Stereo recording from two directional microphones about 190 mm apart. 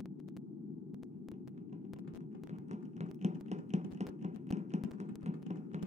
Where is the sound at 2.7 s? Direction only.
35° right (ahead or behind).